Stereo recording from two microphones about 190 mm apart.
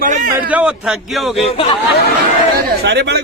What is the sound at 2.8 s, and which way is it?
Speech, 60° right (ahead or behind).